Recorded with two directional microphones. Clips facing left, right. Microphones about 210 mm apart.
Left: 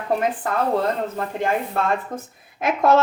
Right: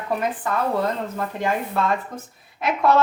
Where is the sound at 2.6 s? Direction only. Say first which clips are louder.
Left 1 dB; 45° left (ahead or behind).